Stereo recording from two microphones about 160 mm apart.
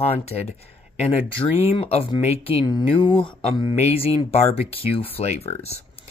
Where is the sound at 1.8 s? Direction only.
40° left (ahead or behind).